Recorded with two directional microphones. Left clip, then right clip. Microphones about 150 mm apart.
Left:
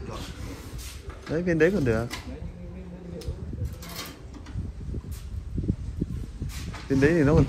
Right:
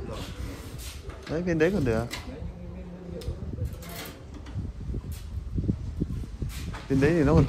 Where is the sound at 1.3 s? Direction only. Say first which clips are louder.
Left 2 dB; 25° right (ahead or behind).